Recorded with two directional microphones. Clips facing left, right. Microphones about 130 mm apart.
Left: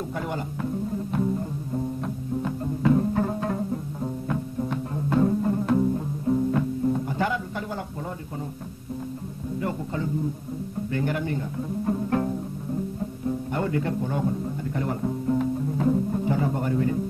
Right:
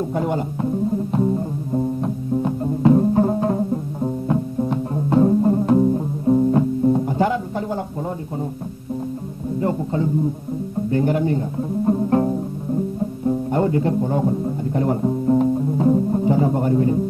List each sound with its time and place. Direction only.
0.1 s speech: 30° right (ahead or behind)
2.0 s music: 30° right (ahead or behind)
9.6 s speech: 30° right (ahead or behind)
10.9 s music: 30° right (ahead or behind)
13.5 s speech: 30° right (ahead or behind)